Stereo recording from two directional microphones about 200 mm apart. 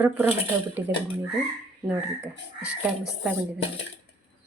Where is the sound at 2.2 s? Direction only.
5° right (ahead or behind).